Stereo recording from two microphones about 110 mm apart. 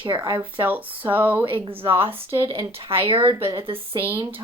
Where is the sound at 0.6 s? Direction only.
15° right (ahead or behind).